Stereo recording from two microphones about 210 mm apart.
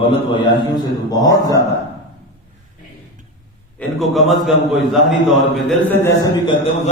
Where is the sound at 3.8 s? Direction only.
Centre (ahead or behind).